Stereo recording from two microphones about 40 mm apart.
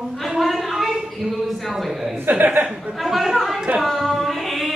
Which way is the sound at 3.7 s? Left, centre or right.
Centre.